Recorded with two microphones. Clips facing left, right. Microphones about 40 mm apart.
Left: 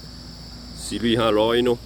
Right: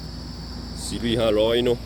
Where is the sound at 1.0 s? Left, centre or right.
Centre.